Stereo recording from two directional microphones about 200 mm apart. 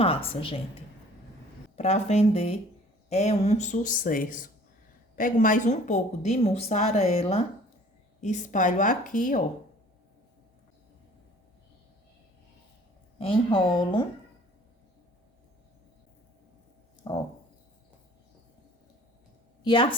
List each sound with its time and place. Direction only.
0.0 s a woman's voice: 30° left (ahead or behind)
1.7 s a woman's voice: 35° left (ahead or behind)
13.1 s a woman's voice: 25° left (ahead or behind)
17.0 s a sound: 20° left (ahead or behind)
19.6 s speech: 25° left (ahead or behind)